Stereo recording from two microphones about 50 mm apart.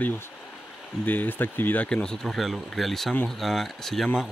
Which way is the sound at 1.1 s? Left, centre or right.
Left.